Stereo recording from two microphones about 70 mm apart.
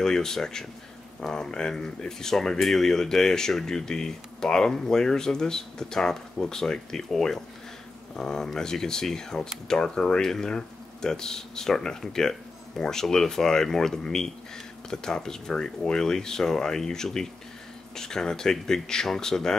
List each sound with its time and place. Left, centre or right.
0.0 s speech: centre